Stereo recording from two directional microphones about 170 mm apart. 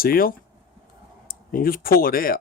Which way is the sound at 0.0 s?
60° left (ahead or behind).